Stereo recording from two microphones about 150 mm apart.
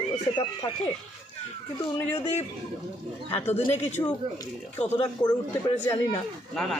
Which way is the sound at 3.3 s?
45° left (ahead or behind).